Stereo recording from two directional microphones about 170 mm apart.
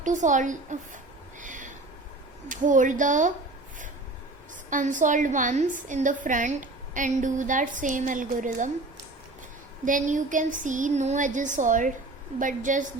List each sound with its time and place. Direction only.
0.0 s a woman's voice: 45° right (ahead or behind)
1.4 s owl: 50° right (ahead or behind)
2.5 s a woman's voice: 50° right (ahead or behind)
4.7 s a woman's voice: 50° right (ahead or behind)
9.8 s a woman's voice: 50° right (ahead or behind)